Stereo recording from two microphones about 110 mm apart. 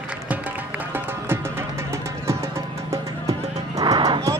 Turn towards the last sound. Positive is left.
turn(degrees=-35)  # may be behind; listen again after turning